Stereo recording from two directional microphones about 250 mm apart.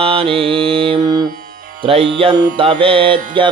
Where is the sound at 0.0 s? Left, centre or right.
Right.